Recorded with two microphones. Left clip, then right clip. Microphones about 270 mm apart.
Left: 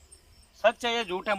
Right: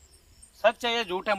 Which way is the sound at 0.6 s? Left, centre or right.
Centre.